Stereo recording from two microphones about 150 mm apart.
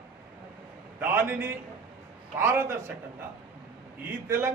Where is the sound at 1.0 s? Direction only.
15° right (ahead or behind).